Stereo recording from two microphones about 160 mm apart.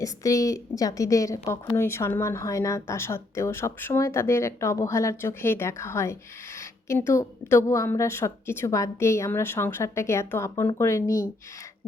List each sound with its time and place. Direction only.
0.0 s a woman's voice: 20° left (ahead or behind)